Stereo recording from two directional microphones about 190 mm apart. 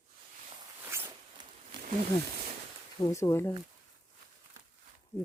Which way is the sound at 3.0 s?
15° left (ahead or behind).